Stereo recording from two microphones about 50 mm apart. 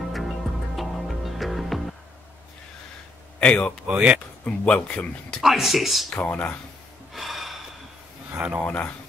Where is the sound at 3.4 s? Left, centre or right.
Left.